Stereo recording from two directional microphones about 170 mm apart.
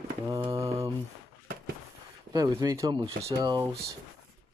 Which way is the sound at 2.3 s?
20° right (ahead or behind).